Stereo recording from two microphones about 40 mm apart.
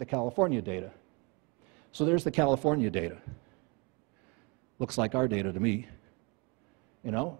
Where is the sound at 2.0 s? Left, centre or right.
Centre.